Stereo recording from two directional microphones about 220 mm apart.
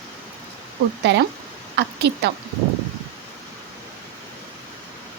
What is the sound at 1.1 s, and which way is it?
A woman's voice, 50° right (ahead or behind).